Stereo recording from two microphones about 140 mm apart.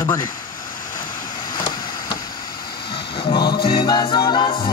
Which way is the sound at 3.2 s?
30° left (ahead or behind).